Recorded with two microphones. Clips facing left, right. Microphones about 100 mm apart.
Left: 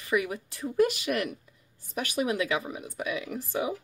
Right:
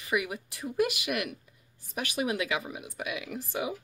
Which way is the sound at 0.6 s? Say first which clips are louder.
Left 4 dB; 35° left (ahead or behind).